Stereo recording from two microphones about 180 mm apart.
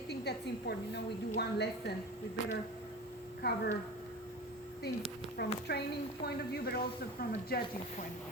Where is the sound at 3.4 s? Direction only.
65° left (ahead or behind).